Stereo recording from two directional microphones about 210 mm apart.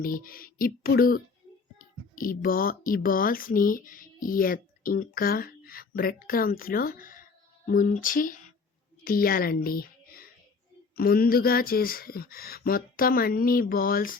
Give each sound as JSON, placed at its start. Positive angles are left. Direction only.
{"t": 0.0, "sound": "speech", "side_deg": 45}
{"t": 7.7, "sound": "a sound", "side_deg": 40}
{"t": 9.0, "sound": "a woman's voice", "side_deg": 45}